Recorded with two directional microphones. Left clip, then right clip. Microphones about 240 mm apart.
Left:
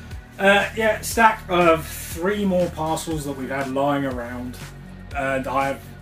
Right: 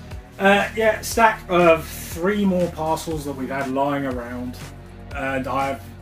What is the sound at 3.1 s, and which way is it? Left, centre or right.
Speech, centre.